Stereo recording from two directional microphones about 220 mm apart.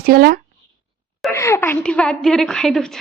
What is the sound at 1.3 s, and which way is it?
A woman's voice, 10° left (ahead or behind).